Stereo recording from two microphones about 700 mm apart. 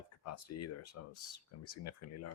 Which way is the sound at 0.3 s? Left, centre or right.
Left.